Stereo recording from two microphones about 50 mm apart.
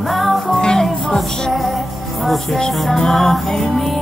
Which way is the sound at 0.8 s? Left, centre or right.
Centre.